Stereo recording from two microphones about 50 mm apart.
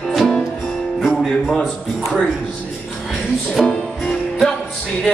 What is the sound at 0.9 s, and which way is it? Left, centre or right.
Music, centre.